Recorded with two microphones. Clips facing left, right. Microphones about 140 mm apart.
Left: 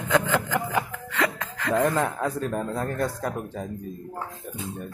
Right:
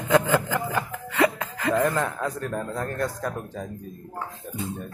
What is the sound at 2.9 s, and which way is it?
Speech, 20° left (ahead or behind).